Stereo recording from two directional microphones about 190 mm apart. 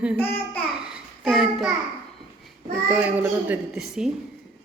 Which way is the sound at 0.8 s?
Centre (ahead or behind).